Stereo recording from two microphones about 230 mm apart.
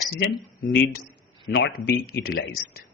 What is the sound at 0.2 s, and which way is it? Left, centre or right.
Speech, left.